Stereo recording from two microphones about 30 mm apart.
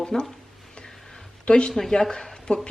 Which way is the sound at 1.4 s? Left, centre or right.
Left.